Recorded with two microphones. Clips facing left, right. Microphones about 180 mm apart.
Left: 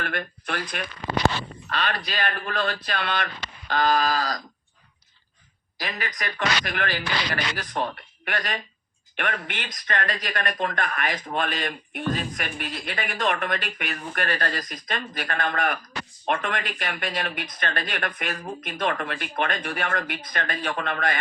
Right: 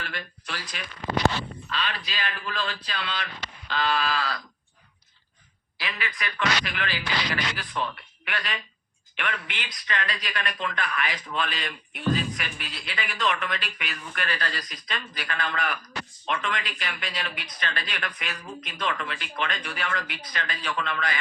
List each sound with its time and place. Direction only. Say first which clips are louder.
0.0 s speech: left 7 dB; 55° left (ahead or behind)
3.7 s a sound: left 4 dB; 45° left (ahead or behind)
5.7 s speech: left 2 dB; 40° left (ahead or behind)